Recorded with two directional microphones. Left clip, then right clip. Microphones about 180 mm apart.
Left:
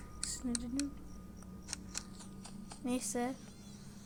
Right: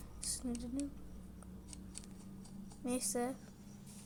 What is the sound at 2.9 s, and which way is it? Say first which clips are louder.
Speech: left 1 dB; centre (ahead or behind).